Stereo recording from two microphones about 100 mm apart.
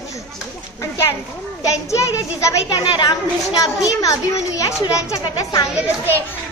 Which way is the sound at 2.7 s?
45° left (ahead or behind).